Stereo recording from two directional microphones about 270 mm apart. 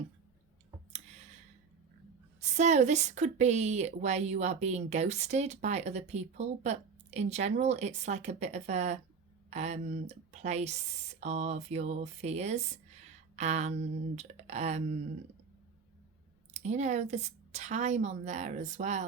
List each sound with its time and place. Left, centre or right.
2.4 s a woman's voice: right
13.3 s a sound: right
14.2 s a woman's voice: right
16.6 s a woman's voice: right